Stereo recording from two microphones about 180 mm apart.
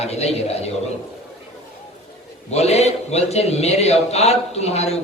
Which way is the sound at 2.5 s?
35° left (ahead or behind).